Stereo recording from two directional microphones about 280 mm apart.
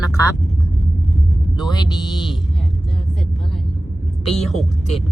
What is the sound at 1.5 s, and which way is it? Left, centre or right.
Speech, centre.